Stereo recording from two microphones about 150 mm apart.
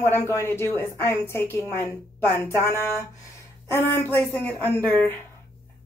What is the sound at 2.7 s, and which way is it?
A woman's voice, 15° left (ahead or behind).